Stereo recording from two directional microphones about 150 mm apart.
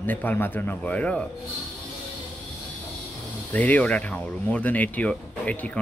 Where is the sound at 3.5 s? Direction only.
10° left (ahead or behind).